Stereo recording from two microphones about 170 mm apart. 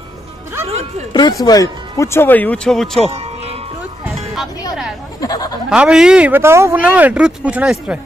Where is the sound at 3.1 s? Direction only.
35° right (ahead or behind).